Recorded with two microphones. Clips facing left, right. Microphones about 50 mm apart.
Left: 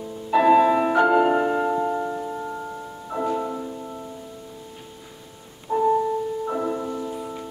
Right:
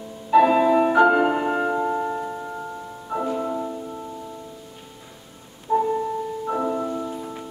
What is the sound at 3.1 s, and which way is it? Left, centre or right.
Music, centre.